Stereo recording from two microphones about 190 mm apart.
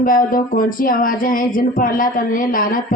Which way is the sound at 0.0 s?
45° left (ahead or behind).